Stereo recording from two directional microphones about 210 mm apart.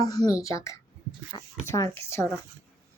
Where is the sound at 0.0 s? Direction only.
15° left (ahead or behind).